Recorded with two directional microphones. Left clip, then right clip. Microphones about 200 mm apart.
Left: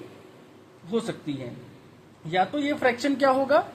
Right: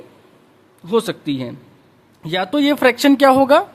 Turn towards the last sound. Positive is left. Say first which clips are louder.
# right 10 dB
turn(degrees=-40)  # may be behind; listen again after turning